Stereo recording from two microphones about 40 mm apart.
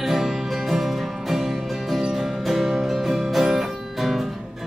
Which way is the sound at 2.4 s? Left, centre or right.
Centre.